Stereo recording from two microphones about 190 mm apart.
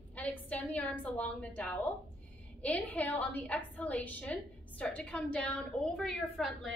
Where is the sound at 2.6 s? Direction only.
10° left (ahead or behind).